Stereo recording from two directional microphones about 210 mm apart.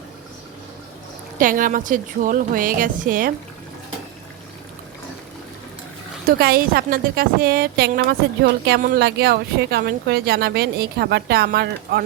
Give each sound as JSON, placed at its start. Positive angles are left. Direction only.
{"t": 1.4, "sound": "a woman's voice", "side_deg": -40}
{"t": 6.2, "sound": "speech", "side_deg": -45}